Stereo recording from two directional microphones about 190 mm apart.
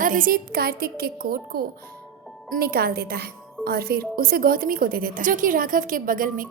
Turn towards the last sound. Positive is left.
turn(degrees=-45)  # may be behind; listen again after turning